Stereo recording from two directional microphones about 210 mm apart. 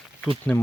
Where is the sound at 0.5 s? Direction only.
10° left (ahead or behind).